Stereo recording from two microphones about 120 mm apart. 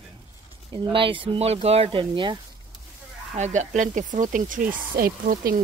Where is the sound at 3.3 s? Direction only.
75° right (ahead or behind).